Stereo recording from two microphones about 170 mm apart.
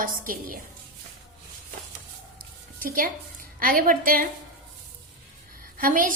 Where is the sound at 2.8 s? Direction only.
55° right (ahead or behind).